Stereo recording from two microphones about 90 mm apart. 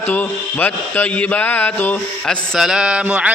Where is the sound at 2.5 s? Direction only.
5° right (ahead or behind).